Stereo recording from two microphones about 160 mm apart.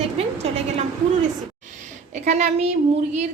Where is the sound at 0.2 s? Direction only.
40° right (ahead or behind).